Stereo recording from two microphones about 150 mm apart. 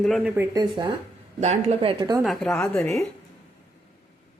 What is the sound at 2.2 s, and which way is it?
Speech, 5° left (ahead or behind).